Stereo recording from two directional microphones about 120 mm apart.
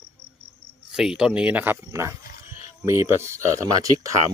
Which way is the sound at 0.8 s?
5° right (ahead or behind).